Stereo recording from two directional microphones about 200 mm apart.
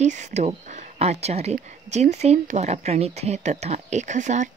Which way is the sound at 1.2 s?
30° right (ahead or behind).